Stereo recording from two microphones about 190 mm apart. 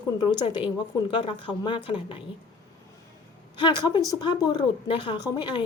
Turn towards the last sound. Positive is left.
turn(degrees=25)  # may be behind; listen again after turning